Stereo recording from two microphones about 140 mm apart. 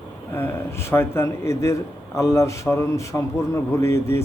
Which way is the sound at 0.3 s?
15° left (ahead or behind).